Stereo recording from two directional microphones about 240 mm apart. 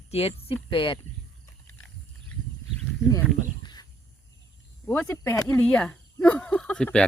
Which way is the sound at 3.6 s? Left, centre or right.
Centre.